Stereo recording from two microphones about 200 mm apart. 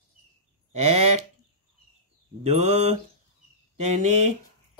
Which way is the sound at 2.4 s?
30° right (ahead or behind).